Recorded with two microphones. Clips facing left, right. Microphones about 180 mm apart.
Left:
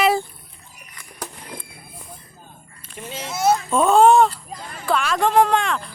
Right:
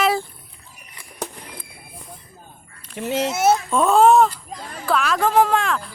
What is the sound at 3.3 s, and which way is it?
Speech, 25° right (ahead or behind).